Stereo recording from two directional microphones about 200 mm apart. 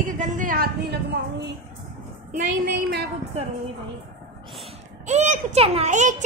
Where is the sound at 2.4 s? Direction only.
45° right (ahead or behind).